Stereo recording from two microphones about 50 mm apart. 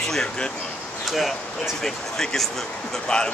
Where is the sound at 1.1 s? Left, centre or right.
Centre.